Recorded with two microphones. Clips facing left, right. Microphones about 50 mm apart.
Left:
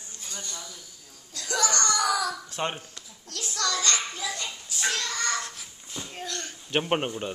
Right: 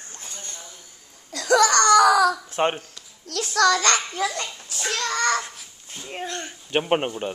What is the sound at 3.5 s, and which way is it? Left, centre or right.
Speech, right.